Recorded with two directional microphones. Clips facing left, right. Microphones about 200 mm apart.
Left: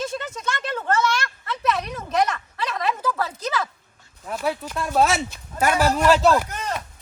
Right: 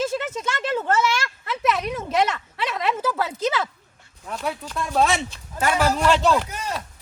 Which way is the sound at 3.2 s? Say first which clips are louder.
Right 2 dB; 25° right (ahead or behind).